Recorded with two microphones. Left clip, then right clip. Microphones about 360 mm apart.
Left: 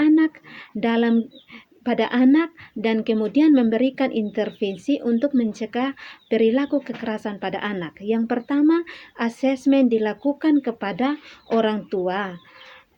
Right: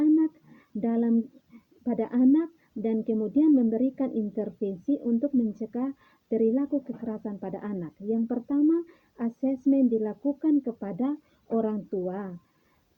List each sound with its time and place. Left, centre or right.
0.0 s a sound: right
1.8 s speech: right
6.3 s speech: right